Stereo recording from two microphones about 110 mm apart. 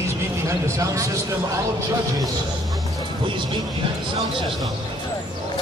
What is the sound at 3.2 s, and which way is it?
Speech, 45° right (ahead or behind).